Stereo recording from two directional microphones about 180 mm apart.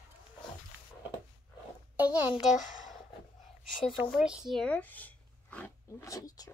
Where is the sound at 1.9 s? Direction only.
10° right (ahead or behind).